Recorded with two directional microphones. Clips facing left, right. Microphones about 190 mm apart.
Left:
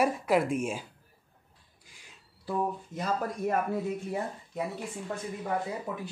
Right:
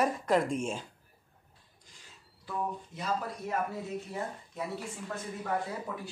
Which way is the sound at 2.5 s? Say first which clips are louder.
Left 5 dB; 50° left (ahead or behind).